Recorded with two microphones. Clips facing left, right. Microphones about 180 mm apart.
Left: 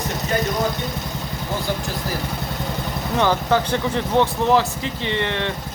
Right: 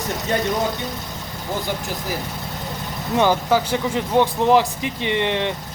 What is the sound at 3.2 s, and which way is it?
Speech, 10° right (ahead or behind).